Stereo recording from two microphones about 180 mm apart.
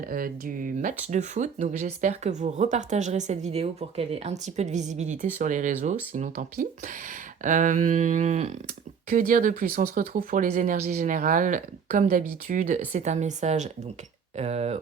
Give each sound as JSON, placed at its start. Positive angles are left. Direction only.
{"t": 0.0, "sound": "speech", "side_deg": -50}